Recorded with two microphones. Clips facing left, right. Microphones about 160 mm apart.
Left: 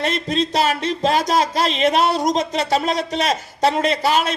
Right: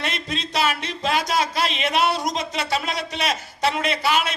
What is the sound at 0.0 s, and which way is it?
Speech, 45° left (ahead or behind).